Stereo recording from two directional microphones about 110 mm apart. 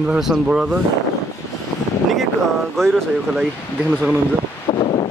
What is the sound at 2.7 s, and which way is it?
Speech, 5° left (ahead or behind).